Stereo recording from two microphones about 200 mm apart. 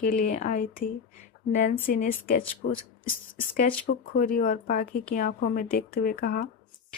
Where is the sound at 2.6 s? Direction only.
70° left (ahead or behind).